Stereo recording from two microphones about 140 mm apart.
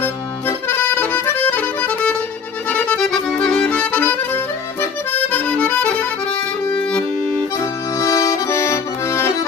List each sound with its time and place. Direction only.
0.0 s accordion: 15° left (ahead or behind)
6.7 s music: 5° left (ahead or behind)
7.6 s accordion: 20° left (ahead or behind)